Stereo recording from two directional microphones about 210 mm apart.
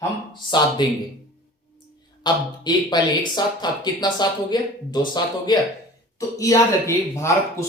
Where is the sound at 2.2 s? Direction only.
20° left (ahead or behind).